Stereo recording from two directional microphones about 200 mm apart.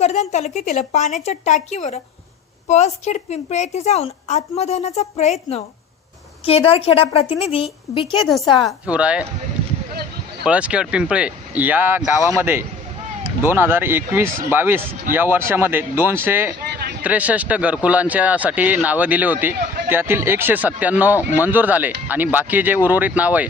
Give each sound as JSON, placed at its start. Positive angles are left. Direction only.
{"t": 0.0, "sound": "a woman's voice", "side_deg": 35}
{"t": 8.5, "sound": "a woman's voice", "side_deg": -5}
{"t": 10.4, "sound": "speech", "side_deg": -5}